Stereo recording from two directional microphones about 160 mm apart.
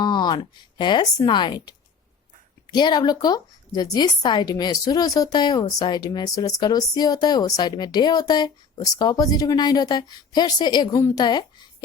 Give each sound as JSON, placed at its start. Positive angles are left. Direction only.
{"t": 0.0, "sound": "a woman's voice", "side_deg": 25}